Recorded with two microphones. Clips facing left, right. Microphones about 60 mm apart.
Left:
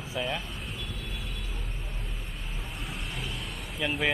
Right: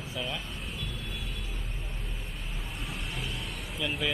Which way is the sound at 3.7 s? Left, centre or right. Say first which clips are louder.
Left 3 dB; centre.